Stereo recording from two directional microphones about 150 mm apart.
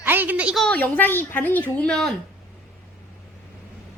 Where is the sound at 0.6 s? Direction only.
10° left (ahead or behind).